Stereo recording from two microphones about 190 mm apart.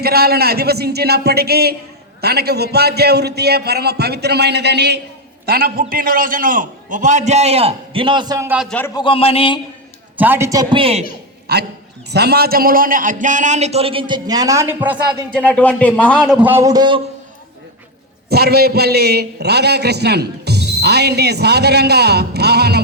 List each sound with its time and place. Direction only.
0.0 s a man's voice: 55° right (ahead or behind); by 8.4 s 20° right (ahead or behind)
9.0 s a man's voice: 30° left (ahead or behind)
10.2 s a man's voice: 10° right (ahead or behind); by 11.0 s 30° right (ahead or behind)
11.5 s a man's voice: 60° right (ahead or behind); by 14.9 s 15° right (ahead or behind)
15.3 s speech: 5° left (ahead or behind)
16.2 s speech: 10° right (ahead or behind)
18.3 s a man's voice: 55° right (ahead or behind)